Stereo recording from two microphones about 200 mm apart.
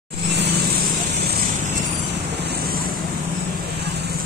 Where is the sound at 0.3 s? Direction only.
55° right (ahead or behind).